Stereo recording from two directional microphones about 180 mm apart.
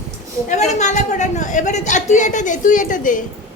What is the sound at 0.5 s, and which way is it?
A man's voice, 40° left (ahead or behind).